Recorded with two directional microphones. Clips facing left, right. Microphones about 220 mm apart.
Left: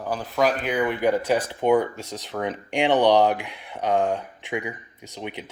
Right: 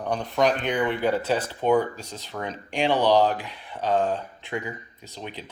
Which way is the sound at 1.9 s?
75° left (ahead or behind).